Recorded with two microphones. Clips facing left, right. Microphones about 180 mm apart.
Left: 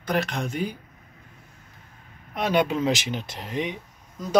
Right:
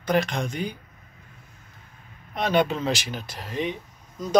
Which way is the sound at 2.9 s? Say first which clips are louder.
Left 2 dB; 20° left (ahead or behind).